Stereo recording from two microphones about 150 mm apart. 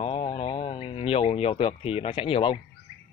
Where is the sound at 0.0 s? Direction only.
40° left (ahead or behind).